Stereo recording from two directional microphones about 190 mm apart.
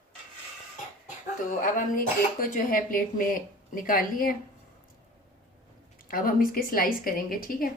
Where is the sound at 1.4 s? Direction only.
45° left (ahead or behind).